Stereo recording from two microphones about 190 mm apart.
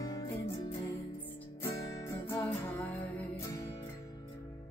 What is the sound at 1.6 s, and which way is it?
Music, 15° left (ahead or behind).